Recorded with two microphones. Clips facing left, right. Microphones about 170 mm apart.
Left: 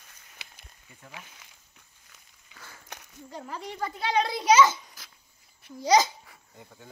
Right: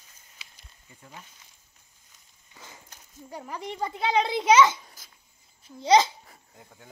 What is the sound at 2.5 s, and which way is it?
Walk, 20° right (ahead or behind).